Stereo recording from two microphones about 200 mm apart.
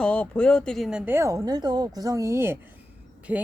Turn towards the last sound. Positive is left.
turn(degrees=-5)  # may be behind; listen again after turning